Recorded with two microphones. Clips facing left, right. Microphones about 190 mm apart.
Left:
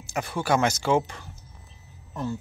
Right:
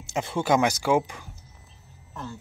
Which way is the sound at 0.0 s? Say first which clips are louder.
Right 2 dB; 25° right (ahead or behind).